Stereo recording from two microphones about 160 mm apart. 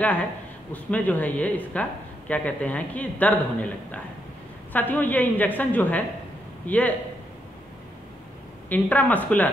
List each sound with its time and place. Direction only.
0.8 s speech: 10° left (ahead or behind)
8.6 s speech: 10° left (ahead or behind)